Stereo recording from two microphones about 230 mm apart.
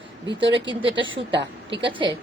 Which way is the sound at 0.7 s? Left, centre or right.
Right.